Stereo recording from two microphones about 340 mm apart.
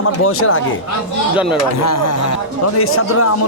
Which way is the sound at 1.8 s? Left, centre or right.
Left.